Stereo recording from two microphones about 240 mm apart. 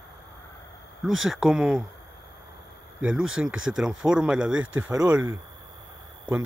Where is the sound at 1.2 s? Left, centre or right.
Centre.